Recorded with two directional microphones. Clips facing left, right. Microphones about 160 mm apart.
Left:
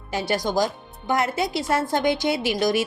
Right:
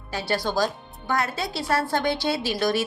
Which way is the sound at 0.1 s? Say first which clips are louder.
Left 2 dB; 20° left (ahead or behind).